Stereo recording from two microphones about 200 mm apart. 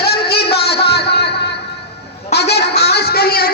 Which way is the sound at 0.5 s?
55° left (ahead or behind).